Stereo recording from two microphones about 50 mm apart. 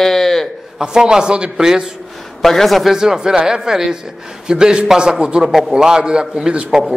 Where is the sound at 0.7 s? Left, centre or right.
Centre.